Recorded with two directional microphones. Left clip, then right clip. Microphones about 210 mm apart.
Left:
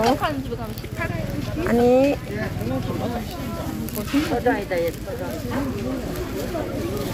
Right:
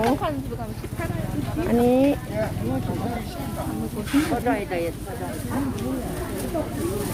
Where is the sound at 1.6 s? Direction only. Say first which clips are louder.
Left 3 dB; 20° right (ahead or behind).